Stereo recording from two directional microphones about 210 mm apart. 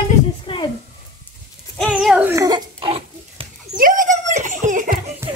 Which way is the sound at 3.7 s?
40° right (ahead or behind).